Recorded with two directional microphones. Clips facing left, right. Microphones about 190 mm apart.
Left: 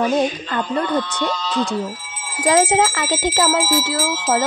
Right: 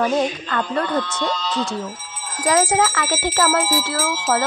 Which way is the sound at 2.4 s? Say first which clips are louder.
Left 2 dB; 25° left (ahead or behind).